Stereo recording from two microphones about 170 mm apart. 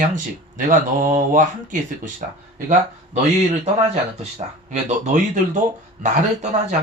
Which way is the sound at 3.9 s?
40° right (ahead or behind).